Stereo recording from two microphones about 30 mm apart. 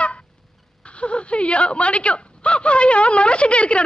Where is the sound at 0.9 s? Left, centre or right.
Left.